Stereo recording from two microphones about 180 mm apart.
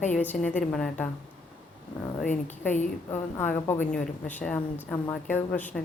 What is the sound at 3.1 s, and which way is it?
A woman's voice, 10° left (ahead or behind).